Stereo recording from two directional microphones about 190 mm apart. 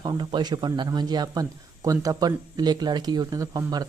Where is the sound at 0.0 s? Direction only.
20° right (ahead or behind).